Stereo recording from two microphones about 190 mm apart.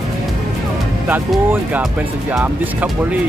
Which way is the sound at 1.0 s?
10° right (ahead or behind).